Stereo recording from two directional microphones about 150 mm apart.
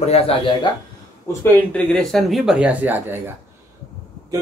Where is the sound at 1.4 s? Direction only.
10° left (ahead or behind); by 3.2 s 10° right (ahead or behind).